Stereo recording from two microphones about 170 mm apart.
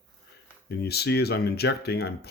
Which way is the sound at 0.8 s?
70° left (ahead or behind).